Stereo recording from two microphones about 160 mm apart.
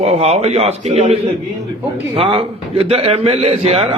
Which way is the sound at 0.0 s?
40° right (ahead or behind).